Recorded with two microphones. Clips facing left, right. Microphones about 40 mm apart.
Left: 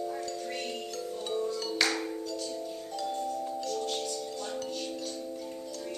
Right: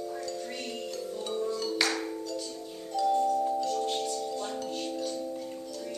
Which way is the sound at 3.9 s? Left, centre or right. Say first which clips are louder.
Right 3 dB; right.